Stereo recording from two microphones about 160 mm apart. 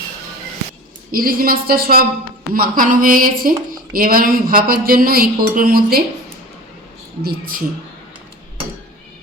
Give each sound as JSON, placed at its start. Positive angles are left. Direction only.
{"t": 1.1, "sound": "a woman's voice", "side_deg": -65}
{"t": 7.2, "sound": "a woman's voice", "side_deg": -70}